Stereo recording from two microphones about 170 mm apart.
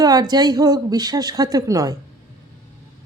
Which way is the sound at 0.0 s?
25° right (ahead or behind).